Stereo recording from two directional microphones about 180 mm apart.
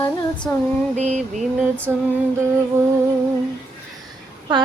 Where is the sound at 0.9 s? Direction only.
40° right (ahead or behind).